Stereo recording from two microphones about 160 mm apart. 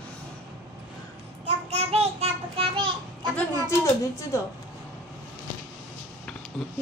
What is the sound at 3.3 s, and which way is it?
A woman's voice, 20° left (ahead or behind).